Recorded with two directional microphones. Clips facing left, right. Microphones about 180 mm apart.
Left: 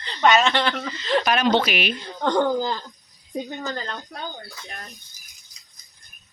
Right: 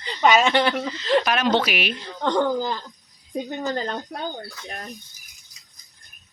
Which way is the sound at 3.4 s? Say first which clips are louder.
Right 4 dB; 15° right (ahead or behind).